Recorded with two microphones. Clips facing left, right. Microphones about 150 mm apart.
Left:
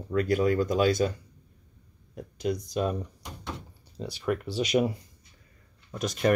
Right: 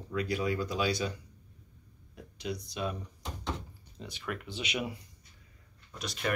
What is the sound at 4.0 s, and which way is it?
Speech, 35° left (ahead or behind).